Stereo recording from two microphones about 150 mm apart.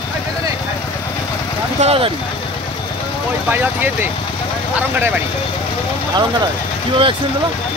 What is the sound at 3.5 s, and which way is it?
Speech, 15° right (ahead or behind).